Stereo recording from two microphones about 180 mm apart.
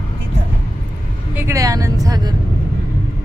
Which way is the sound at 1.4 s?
15° right (ahead or behind).